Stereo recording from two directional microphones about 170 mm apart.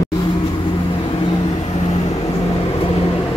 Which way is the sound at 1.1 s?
30° left (ahead or behind).